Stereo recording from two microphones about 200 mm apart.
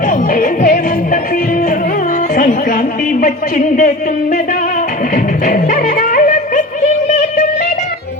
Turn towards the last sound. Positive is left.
turn(degrees=35)  # may be behind; listen again after turning